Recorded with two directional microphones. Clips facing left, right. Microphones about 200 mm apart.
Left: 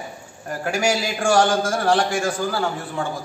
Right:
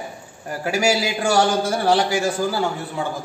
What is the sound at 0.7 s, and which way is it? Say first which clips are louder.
A man's voice: right 2 dB; 5° right (ahead or behind).